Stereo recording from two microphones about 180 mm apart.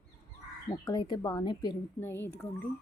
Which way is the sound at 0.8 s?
20° left (ahead or behind).